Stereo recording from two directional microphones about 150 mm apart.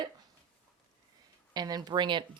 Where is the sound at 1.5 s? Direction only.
25° right (ahead or behind).